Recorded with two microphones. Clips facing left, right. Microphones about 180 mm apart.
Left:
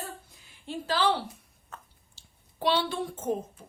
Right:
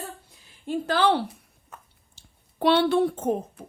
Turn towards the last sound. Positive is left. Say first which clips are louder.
# right 4 dB
turn(degrees=-65)  # may be behind; listen again after turning